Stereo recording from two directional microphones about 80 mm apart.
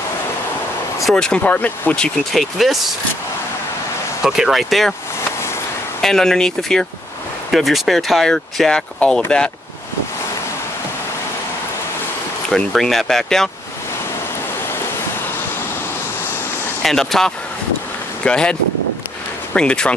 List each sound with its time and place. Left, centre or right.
1.1 s speech: centre
2.3 s speech: centre
4.2 s speech: centre
5.9 s speech: centre
12.4 s speech: centre
16.8 s speech: centre